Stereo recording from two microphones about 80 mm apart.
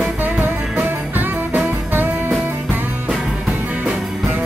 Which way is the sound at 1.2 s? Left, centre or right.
Right.